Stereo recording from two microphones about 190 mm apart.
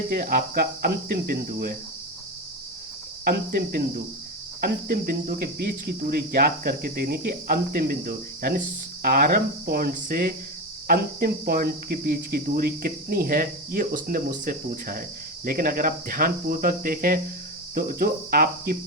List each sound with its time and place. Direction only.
0.1 s cricket: 50° right (ahead or behind)
3.2 s cricket: 55° right (ahead or behind)